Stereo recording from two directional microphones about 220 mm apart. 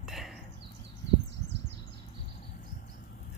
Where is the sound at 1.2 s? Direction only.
55° right (ahead or behind).